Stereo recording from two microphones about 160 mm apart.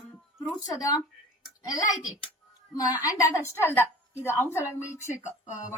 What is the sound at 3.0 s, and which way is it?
A woman's voice, 20° left (ahead or behind).